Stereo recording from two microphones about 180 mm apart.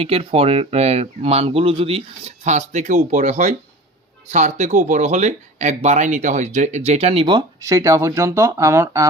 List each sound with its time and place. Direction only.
0.0 s speech: 30° right (ahead or behind); by 9.0 s 15° right (ahead or behind)